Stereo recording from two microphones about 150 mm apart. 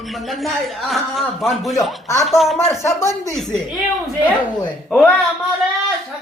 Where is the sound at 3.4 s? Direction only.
Centre (ahead or behind).